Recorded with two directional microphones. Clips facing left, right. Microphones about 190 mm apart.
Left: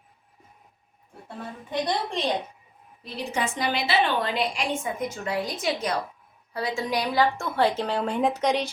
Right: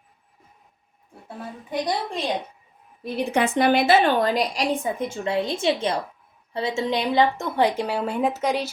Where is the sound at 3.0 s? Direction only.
60° right (ahead or behind).